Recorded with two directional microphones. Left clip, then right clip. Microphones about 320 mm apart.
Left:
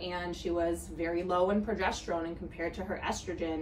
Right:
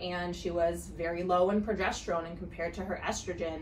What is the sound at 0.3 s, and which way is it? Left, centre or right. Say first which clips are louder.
Speech: right 1 dB; centre.